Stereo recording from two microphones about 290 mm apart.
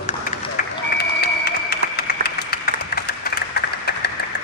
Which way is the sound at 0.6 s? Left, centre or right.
Left.